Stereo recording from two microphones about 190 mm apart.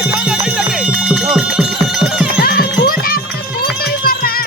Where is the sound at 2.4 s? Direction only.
55° left (ahead or behind).